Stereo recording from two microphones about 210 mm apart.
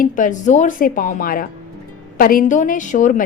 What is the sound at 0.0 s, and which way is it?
A woman's voice, 40° left (ahead or behind).